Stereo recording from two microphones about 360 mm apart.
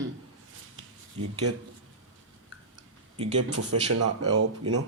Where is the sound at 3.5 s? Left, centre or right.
Right.